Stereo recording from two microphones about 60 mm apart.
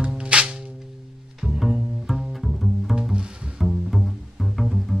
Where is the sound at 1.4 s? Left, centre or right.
Centre.